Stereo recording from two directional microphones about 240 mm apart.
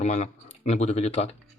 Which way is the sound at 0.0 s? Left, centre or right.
Left.